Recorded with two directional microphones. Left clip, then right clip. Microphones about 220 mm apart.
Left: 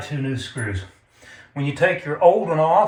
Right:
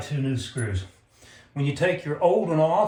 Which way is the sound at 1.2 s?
5° left (ahead or behind).